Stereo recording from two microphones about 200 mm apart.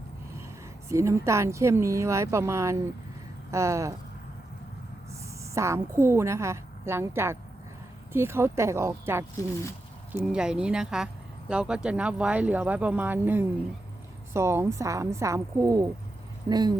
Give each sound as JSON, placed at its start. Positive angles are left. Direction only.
{"t": 0.9, "sound": "speech", "side_deg": -15}
{"t": 5.4, "sound": "a woman's voice", "side_deg": -15}